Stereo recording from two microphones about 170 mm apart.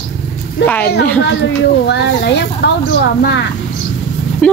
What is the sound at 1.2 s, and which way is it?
Speech, 90° left.